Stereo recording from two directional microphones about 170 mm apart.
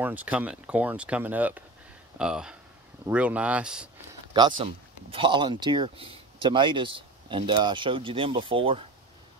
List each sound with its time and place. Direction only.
0.0 s speech: 10° right (ahead or behind)
4.3 s speech: 30° right (ahead or behind)